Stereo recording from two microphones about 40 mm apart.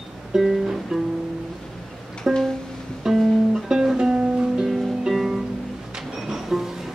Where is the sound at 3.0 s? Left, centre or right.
Centre; by 4.4 s right.